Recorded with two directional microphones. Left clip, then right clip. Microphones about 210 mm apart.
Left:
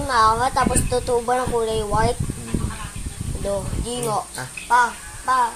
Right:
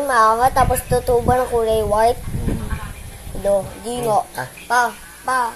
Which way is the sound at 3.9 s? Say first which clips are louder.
Right 6 dB; centre (ahead or behind).